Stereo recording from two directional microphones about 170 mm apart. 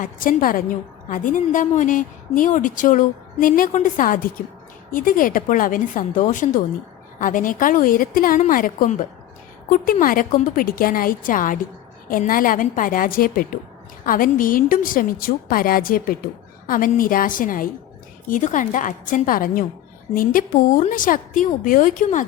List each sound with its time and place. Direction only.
0.0 s a woman's voice: 50° left (ahead or behind)